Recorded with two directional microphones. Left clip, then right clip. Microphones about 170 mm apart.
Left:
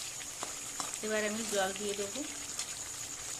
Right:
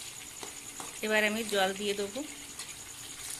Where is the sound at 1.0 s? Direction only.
15° right (ahead or behind).